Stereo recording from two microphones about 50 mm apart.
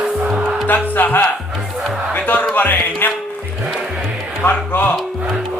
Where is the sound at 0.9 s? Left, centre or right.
Left.